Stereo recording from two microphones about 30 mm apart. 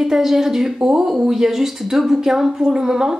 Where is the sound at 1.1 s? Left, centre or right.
Centre.